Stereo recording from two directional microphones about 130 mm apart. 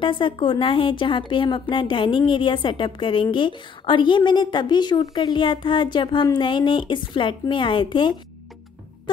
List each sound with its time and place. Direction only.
0.0 s speech: 40° left (ahead or behind)